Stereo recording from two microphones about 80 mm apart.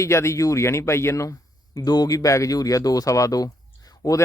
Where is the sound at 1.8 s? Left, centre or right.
Left.